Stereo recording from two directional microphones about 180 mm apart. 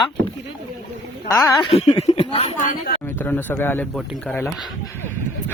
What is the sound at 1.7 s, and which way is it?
Speech, 35° left (ahead or behind).